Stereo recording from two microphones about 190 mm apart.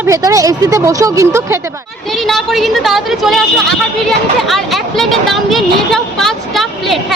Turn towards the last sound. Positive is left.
turn(degrees=0)  # may be behind; listen again after turning